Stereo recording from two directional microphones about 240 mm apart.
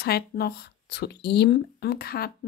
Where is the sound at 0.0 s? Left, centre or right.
Left.